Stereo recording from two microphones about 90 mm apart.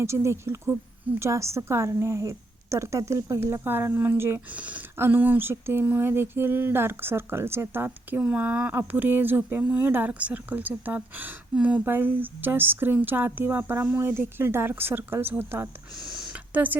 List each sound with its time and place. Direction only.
0.0 s a woman's voice: 30° right (ahead or behind)
3.6 s speech: 20° right (ahead or behind)
16.1 s a sound: 5° right (ahead or behind)
16.5 s speech: 20° right (ahead or behind)